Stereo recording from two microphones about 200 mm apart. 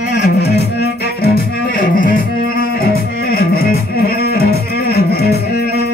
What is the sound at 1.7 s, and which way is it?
Music, 45° left (ahead or behind).